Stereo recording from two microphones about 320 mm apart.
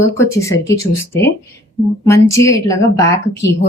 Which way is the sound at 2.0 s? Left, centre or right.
Centre.